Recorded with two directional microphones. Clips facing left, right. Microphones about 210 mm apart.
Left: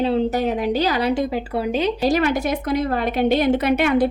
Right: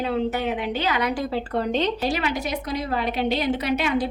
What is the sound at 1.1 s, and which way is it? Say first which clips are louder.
Speech: left 4 dB; 15° left (ahead or behind).